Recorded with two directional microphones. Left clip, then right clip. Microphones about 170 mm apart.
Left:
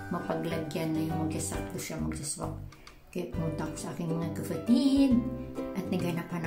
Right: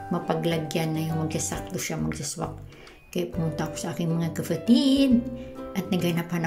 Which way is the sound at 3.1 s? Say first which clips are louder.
Right 6 dB; 15° right (ahead or behind).